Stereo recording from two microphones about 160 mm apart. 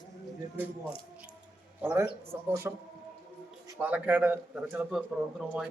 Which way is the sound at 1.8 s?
10° right (ahead or behind).